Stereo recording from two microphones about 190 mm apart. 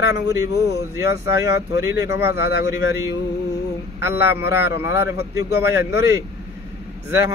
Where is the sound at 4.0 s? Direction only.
10° right (ahead or behind).